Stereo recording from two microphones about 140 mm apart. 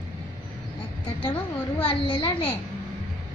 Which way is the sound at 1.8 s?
40° left (ahead or behind).